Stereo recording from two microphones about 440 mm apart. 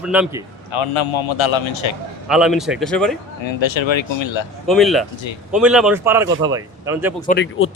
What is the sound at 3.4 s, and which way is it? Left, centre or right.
A man's voice, left.